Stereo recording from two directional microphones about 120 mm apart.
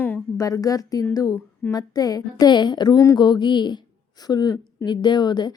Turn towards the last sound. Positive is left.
turn(degrees=35)  # may be behind; listen again after turning